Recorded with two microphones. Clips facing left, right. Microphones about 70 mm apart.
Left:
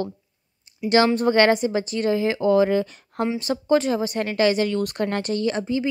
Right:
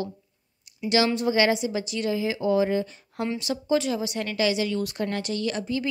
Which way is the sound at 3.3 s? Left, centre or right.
Left.